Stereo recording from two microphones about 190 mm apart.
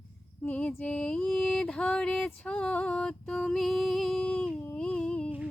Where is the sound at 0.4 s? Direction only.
5° left (ahead or behind).